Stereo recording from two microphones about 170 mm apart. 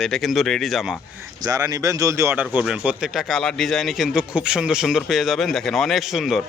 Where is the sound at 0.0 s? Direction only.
Centre (ahead or behind).